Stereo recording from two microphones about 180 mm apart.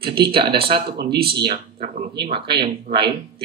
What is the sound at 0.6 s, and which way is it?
Speech, 60° right (ahead or behind).